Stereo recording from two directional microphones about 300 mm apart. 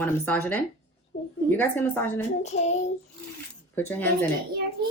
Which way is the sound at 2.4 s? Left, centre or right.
Left.